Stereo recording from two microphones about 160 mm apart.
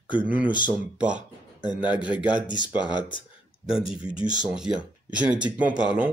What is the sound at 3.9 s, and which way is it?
Speech, 5° right (ahead or behind).